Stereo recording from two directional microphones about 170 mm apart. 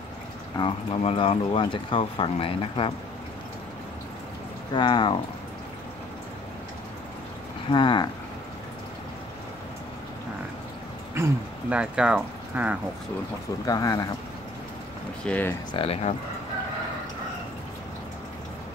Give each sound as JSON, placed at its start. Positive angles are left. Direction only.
{"t": 0.6, "sound": "speech", "side_deg": 30}
{"t": 4.7, "sound": "speech", "side_deg": 30}
{"t": 7.7, "sound": "speech", "side_deg": 25}
{"t": 11.1, "sound": "speech", "side_deg": -10}
{"t": 13.7, "sound": "speech", "side_deg": 20}
{"t": 15.2, "sound": "speech", "side_deg": 10}
{"t": 15.7, "sound": "speech", "side_deg": 35}